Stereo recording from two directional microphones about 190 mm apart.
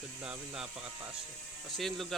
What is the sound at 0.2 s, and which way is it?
Speech, 5° right (ahead or behind).